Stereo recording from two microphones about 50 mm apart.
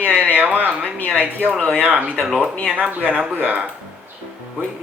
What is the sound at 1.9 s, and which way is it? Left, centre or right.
Speech, right.